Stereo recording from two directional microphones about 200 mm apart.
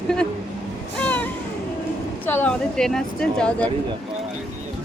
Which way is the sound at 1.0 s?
5° left (ahead or behind).